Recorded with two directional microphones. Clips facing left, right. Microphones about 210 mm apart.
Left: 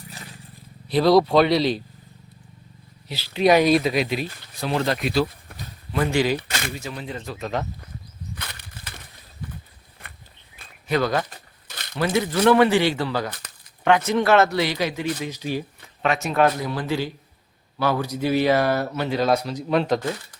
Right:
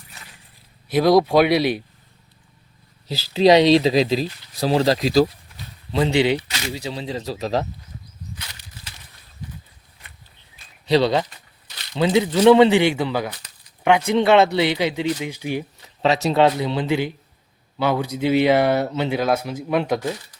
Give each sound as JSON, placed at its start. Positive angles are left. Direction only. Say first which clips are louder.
{"t": 1.0, "sound": "speech", "louder": "right 1 dB", "side_deg": -10}
{"t": 3.1, "sound": "speech", "louder": "right 4 dB", "side_deg": -30}
{"t": 5.5, "sound": "a sound", "louder": "left 2 dB", "side_deg": 55}
{"t": 5.9, "sound": "speech", "louder": "right 3 dB", "side_deg": -20}
{"t": 6.5, "sound": "a sound", "louder": "left 2 dB", "side_deg": 50}
{"t": 6.9, "sound": "speech", "louder": "right 5 dB", "side_deg": -25}
{"t": 8.4, "sound": "a sound", "louder": "left 3 dB", "side_deg": 55}
{"t": 10.6, "sound": "a sound", "louder": "left 6 dB", "side_deg": 60}
{"t": 11.0, "sound": "speech", "louder": "right 4 dB", "side_deg": -25}
{"t": 11.3, "sound": "crumpling", "louder": "left 5 dB", "side_deg": 50}
{"t": 11.9, "sound": "speech", "louder": "right 4 dB", "side_deg": -20}
{"t": 16.0, "sound": "speech", "louder": "right 3 dB", "side_deg": -25}
{"t": 19.2, "sound": "speech", "louder": "even", "side_deg": -5}